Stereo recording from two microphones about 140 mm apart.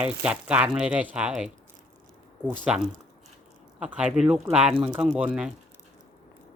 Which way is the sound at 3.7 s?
10° right (ahead or behind).